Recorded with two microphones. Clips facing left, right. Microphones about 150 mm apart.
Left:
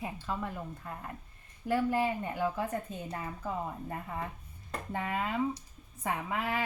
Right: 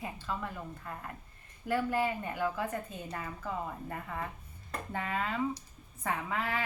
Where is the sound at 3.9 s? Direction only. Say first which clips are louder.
Left 1 dB; 20° left (ahead or behind).